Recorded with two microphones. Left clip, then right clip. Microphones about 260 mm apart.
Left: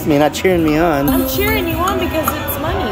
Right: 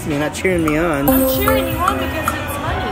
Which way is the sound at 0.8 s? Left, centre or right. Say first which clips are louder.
Left 3 dB; centre.